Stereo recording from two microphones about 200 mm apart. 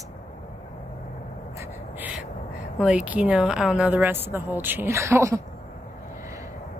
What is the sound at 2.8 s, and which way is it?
A woman's voice, 5° right (ahead or behind).